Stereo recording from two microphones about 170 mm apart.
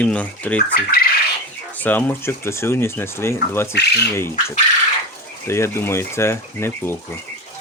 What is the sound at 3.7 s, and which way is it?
Speech, 80° left.